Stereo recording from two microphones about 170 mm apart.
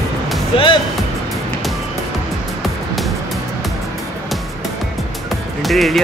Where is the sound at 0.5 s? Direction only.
35° left (ahead or behind).